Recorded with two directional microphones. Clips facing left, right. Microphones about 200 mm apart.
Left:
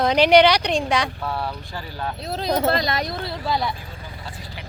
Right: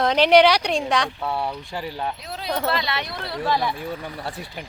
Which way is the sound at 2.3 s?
40° left (ahead or behind).